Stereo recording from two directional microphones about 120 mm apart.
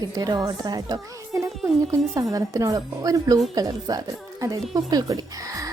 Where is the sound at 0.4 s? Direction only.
35° right (ahead or behind).